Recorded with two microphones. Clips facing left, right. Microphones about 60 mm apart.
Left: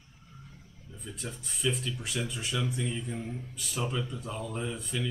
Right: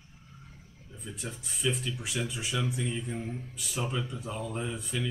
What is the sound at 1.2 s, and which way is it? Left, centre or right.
Speech, centre.